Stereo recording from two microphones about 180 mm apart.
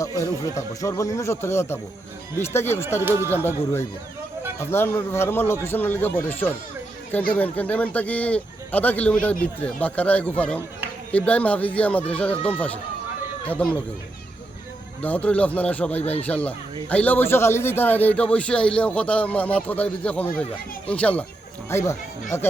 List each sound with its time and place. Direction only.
0.0 s a man's voice: 20° left (ahead or behind)
3.0 s speech: 15° right (ahead or behind)
3.2 s a man's voice: 10° left (ahead or behind)
15.0 s a man's voice: 10° left (ahead or behind)
16.0 s speech: 35° left (ahead or behind)
16.2 s a man's voice: 10° left (ahead or behind)